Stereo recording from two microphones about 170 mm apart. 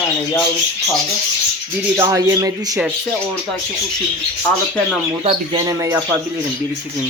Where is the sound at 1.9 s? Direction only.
20° right (ahead or behind).